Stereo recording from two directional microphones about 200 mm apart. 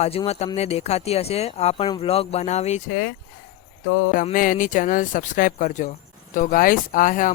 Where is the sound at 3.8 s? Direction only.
90° left.